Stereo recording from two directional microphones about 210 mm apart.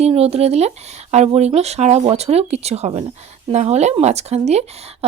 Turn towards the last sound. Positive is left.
turn(degrees=-30)  # may be behind; listen again after turning